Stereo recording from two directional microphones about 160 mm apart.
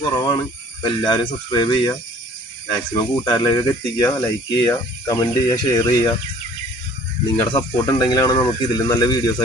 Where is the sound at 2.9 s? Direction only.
25° left (ahead or behind).